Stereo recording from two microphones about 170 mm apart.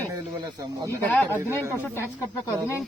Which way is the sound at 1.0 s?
10° left (ahead or behind).